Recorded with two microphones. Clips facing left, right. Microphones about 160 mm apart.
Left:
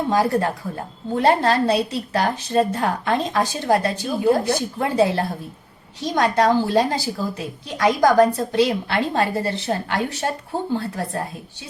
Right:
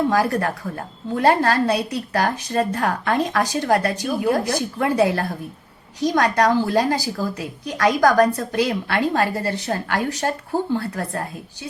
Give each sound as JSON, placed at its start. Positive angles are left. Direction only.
{"t": 0.1, "sound": "a woman's voice", "side_deg": 25}